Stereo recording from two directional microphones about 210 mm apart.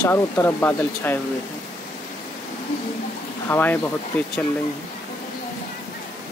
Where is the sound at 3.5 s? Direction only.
10° left (ahead or behind).